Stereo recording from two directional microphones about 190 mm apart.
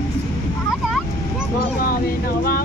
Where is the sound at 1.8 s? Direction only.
50° left (ahead or behind).